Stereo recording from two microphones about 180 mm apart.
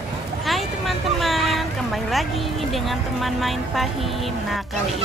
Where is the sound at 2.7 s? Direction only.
Centre (ahead or behind).